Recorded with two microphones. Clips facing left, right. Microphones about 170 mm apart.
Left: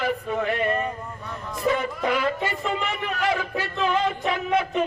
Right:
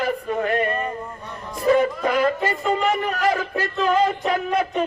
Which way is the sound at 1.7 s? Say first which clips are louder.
Right 6 dB; 45° right (ahead or behind).